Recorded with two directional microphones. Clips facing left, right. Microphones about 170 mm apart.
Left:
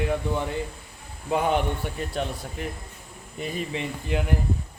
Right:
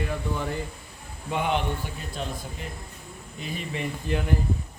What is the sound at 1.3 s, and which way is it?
Speech, 40° left (ahead or behind).